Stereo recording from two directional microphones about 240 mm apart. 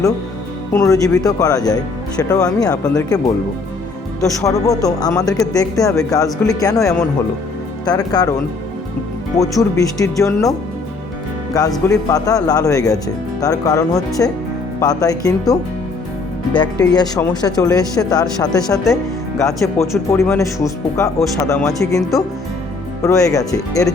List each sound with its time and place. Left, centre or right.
0.7 s speech: centre
2.8 s speech: centre
4.2 s speech: centre
9.4 s speech: centre
11.6 s speech: centre
16.6 s speech: centre